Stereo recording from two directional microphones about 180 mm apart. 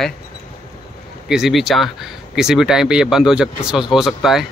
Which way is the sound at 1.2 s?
Centre (ahead or behind).